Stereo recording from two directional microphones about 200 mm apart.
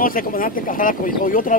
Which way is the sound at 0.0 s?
45° left (ahead or behind).